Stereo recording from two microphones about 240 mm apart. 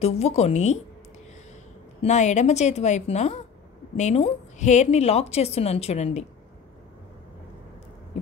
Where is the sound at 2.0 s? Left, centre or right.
Left.